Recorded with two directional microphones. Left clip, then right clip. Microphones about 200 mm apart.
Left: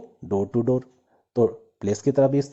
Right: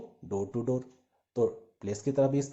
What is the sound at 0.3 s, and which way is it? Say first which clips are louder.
Speech: left 9 dB; 35° left (ahead or behind).